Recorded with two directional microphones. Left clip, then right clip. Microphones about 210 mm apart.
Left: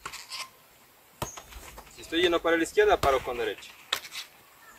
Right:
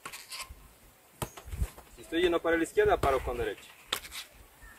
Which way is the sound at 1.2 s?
30° right (ahead or behind).